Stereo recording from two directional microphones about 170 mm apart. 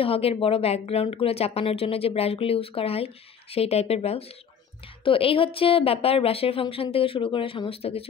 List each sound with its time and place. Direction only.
0.0 s a woman's voice: 35° left (ahead or behind)